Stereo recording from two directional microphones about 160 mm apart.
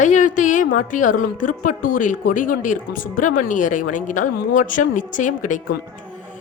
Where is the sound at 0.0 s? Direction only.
50° left (ahead or behind).